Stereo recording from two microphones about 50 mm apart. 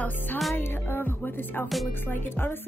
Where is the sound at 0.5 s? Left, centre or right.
Left.